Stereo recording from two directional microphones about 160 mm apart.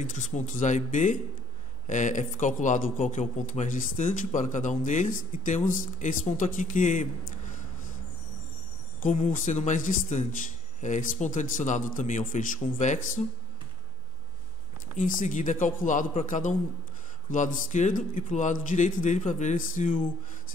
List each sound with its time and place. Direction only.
0.0 s speech: 50° left (ahead or behind)
9.0 s speech: 55° left (ahead or behind)
15.0 s speech: 55° left (ahead or behind)